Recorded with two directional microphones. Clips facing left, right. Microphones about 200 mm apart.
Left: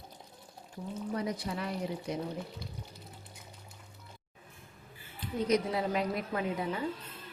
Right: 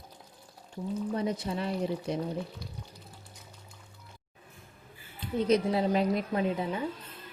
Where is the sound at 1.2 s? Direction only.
25° right (ahead or behind).